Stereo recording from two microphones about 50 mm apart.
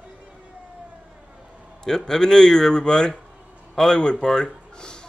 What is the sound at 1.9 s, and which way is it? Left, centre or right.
A man's voice, centre.